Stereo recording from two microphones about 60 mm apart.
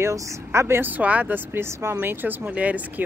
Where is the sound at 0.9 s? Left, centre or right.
Right.